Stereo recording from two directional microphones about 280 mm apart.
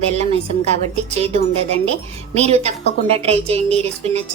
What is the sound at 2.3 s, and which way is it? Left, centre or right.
A woman's voice, right.